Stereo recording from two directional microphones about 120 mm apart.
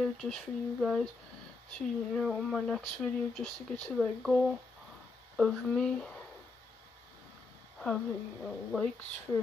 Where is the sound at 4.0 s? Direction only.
5° left (ahead or behind).